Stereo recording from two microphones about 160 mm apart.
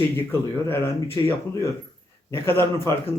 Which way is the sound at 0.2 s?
15° left (ahead or behind).